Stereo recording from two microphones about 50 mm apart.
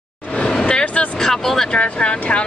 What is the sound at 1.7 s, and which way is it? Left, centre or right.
Speech, left.